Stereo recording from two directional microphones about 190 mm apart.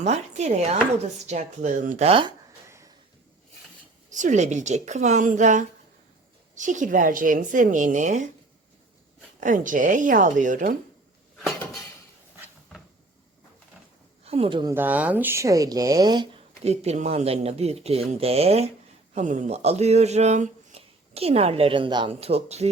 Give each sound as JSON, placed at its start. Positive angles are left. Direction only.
{"t": 0.0, "sound": "speech", "side_deg": -35}
{"t": 2.6, "sound": "a sound", "side_deg": -15}
{"t": 4.1, "sound": "a woman's voice", "side_deg": -40}
{"t": 9.4, "sound": "a woman's voice", "side_deg": -45}
{"t": 14.3, "sound": "speech", "side_deg": -30}
{"t": 14.7, "sound": "speech", "side_deg": -10}
{"t": 16.6, "sound": "speech", "side_deg": -35}